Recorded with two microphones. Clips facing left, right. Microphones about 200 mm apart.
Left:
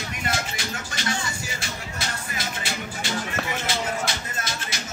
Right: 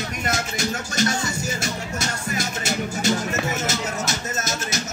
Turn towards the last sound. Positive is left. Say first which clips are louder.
# right 6 dB
turn(degrees=-45)  # may be behind; listen again after turning